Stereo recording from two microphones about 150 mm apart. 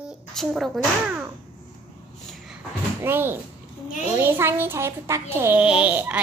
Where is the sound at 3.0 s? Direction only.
15° right (ahead or behind).